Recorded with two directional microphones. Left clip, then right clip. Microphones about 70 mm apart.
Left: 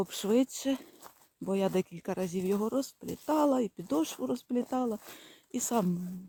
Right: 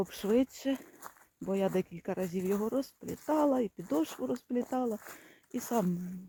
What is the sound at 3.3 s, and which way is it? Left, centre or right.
Speech, centre.